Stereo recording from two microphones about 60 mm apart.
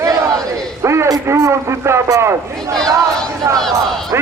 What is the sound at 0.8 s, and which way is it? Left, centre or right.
A man's voice, right.